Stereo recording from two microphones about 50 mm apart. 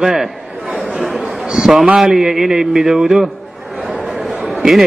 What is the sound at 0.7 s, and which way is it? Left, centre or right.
Chatter, right.